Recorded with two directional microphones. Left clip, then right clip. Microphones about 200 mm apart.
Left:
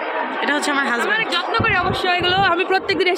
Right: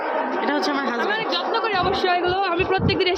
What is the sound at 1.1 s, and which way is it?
Speech, 20° right (ahead or behind).